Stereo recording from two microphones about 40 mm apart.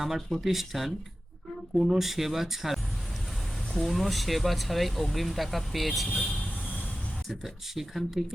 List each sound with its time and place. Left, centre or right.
0.0 s speech: centre
6.3 s vehicle: left
7.3 s speech: centre